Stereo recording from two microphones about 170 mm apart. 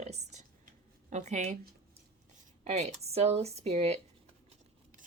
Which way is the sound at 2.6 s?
40° right (ahead or behind).